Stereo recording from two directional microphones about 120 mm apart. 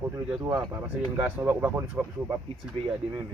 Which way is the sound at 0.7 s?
15° right (ahead or behind).